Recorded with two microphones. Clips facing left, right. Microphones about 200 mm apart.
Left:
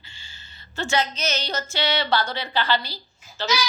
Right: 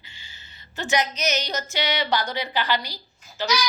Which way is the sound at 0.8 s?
15° right (ahead or behind).